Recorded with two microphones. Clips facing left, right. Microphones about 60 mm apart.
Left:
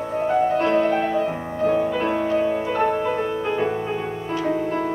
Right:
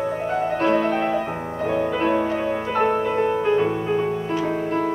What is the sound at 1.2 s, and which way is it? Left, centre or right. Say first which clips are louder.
Music: left 3 dB; right.